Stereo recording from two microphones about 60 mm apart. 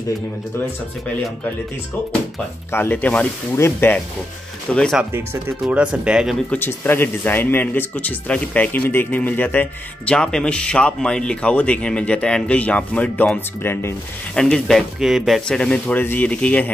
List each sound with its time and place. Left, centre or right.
2.9 s speech: left
3.5 s speech: left
4.7 s speech: centre
5.7 s speech: centre
6.6 s speech: left
10.0 s speech: centre
13.6 s speech: left
14.3 s speech: centre
15.0 s speech: centre
15.4 s speech: centre
15.9 s speech: left